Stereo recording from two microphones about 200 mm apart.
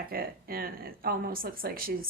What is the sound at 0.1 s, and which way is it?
Speech, 45° right (ahead or behind).